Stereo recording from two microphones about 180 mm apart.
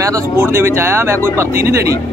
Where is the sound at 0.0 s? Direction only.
15° right (ahead or behind).